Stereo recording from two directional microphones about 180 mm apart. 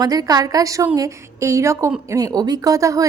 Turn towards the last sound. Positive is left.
turn(degrees=-20)  # may be behind; listen again after turning